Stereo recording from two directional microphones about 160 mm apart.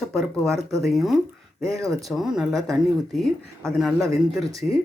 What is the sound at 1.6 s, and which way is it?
Speech, 20° right (ahead or behind).